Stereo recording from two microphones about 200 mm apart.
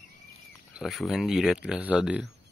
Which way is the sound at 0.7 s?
Centre (ahead or behind).